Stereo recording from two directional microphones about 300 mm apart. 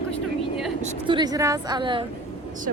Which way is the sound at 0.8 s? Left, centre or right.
Centre.